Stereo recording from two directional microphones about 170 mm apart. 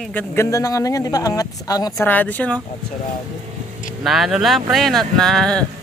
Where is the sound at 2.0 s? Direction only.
10° left (ahead or behind).